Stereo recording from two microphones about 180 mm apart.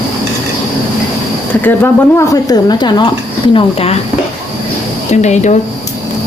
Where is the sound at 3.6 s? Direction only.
35° left (ahead or behind).